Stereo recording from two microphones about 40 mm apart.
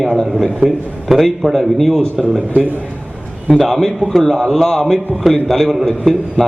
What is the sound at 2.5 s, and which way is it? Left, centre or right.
Speech, right.